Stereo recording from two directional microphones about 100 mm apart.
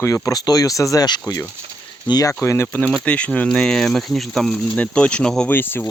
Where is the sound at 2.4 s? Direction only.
25° left (ahead or behind).